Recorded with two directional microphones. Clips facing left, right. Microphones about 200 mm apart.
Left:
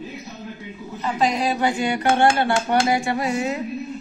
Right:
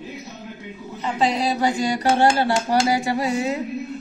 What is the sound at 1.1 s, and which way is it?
Speech, 30° right (ahead or behind).